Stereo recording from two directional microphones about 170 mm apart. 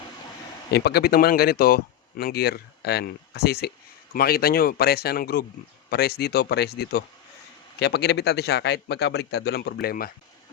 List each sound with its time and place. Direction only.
0.7 s speech: 70° left (ahead or behind)